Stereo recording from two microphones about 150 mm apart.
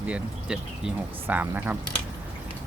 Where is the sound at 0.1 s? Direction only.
5° right (ahead or behind).